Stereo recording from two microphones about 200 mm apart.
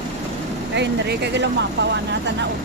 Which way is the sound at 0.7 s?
60° right (ahead or behind).